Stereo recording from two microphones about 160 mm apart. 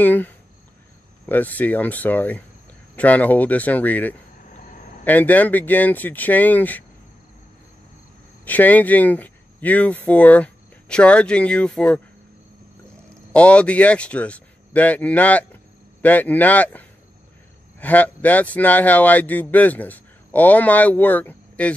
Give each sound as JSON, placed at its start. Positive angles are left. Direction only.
{"t": 0.0, "sound": "a man's voice", "side_deg": 10}
{"t": 4.6, "sound": "cricket", "side_deg": 55}
{"t": 5.0, "sound": "a man's voice", "side_deg": 10}
{"t": 8.5, "sound": "a man's voice", "side_deg": 10}